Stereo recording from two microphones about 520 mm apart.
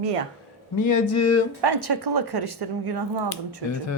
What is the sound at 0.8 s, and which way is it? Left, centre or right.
Speech, left.